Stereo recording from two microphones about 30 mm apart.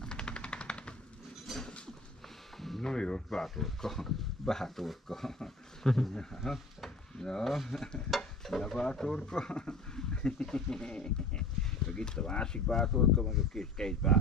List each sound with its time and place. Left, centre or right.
0.0 s machine gun: left
1.5 s a sound: centre
2.8 s speech: left
3.4 s speech: centre
7.2 s speech: centre
7.4 s speech: centre
8.2 s stir: centre
8.8 s speech: left
9.5 s a sound: left
11.9 s speech: left
12.9 s speech: centre
13.5 s speech: left